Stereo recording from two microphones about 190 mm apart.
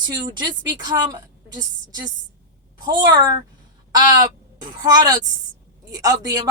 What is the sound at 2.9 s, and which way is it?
Speech, 20° right (ahead or behind).